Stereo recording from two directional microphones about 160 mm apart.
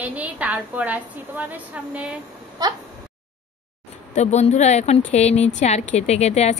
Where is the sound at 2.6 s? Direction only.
25° right (ahead or behind).